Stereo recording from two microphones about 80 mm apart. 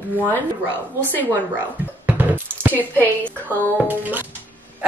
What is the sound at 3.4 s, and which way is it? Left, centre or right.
Speech, right.